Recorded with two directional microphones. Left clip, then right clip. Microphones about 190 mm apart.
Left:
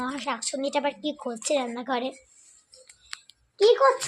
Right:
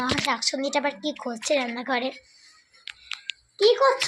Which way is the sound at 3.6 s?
45° left (ahead or behind).